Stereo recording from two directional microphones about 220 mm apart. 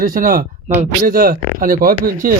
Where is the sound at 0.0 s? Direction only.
40° right (ahead or behind).